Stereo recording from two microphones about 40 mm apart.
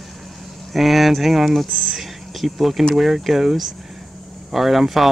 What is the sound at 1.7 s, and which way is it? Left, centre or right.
Speech, right.